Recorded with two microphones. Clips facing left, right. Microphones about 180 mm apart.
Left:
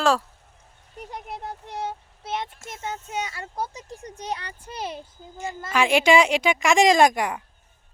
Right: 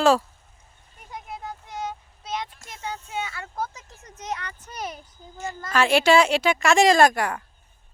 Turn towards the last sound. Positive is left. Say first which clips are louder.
# even
turn(degrees=20)  # may be behind; listen again after turning